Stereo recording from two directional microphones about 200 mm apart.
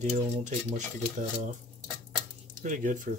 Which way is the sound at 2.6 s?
40° right (ahead or behind).